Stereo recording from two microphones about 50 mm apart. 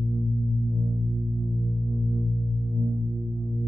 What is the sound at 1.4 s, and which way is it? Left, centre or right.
Music, centre.